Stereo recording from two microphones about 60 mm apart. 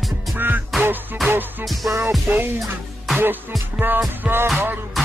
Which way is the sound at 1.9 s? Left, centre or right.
Right.